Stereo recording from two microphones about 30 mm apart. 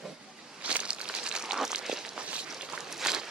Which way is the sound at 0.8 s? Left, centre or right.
Right.